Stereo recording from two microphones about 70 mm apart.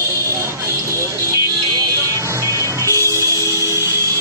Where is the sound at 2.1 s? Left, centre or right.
Right.